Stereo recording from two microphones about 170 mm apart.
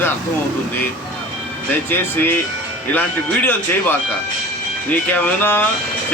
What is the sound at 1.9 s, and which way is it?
A man's voice, 10° left (ahead or behind).